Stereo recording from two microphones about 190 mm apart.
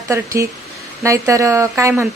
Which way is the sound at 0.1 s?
15° right (ahead or behind).